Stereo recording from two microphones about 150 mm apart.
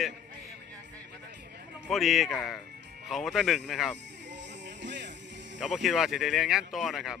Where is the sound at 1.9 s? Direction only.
Centre (ahead or behind).